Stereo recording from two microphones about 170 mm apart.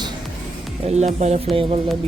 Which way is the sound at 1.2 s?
45° right (ahead or behind).